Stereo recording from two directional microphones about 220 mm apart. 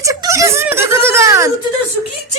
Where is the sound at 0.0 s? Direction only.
15° right (ahead or behind).